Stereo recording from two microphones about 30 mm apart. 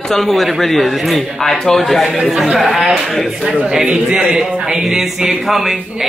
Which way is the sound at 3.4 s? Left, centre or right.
Right.